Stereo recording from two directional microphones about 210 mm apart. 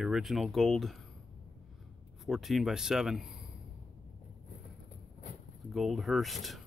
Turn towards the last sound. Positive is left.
turn(degrees=0)  # may be behind; listen again after turning